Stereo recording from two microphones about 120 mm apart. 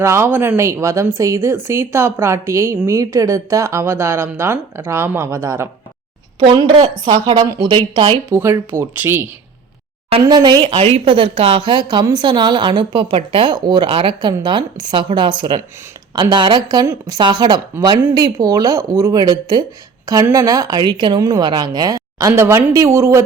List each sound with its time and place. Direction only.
0.0 s speech: 20° right (ahead or behind)
6.4 s a woman's voice: 40° right (ahead or behind)
8.3 s speech: 20° right (ahead or behind)
10.2 s a woman's voice: 35° right (ahead or behind)
17.2 s a woman's voice: 40° right (ahead or behind)